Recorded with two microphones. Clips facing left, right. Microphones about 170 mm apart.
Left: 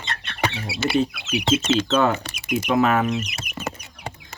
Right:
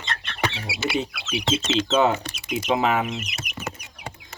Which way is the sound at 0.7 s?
25° left (ahead or behind).